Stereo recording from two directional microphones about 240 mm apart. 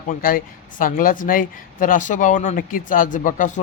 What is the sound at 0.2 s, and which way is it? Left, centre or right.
Speech, left.